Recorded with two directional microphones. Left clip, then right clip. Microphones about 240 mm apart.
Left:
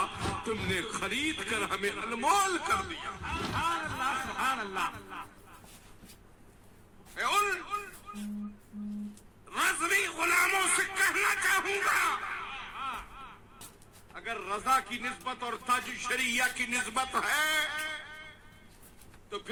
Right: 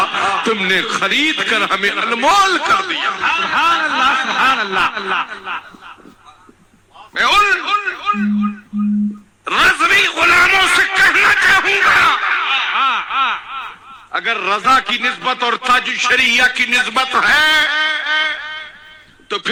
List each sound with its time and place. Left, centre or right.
0.0 s a man's voice: right
7.2 s speech: right
9.5 s a man's voice: right